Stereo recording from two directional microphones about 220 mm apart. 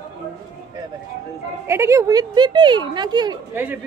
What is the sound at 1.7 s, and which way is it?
Speech, 10° right (ahead or behind).